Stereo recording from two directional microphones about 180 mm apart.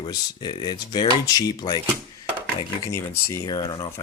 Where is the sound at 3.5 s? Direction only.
20° left (ahead or behind).